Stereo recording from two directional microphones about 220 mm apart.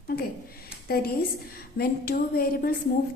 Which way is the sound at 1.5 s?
45° left (ahead or behind).